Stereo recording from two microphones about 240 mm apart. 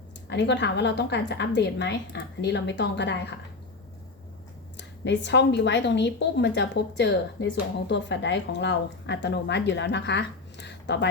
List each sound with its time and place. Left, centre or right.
0.3 s a woman's voice: left
4.8 s a woman's voice: left